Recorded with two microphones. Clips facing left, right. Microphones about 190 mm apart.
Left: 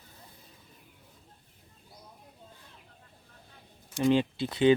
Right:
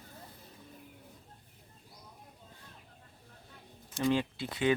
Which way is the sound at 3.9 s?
20° left (ahead or behind).